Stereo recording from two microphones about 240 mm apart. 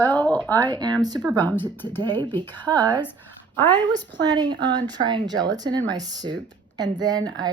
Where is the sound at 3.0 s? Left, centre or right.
Centre.